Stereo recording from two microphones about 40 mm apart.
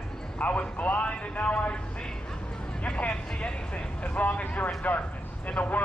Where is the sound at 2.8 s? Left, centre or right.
Left.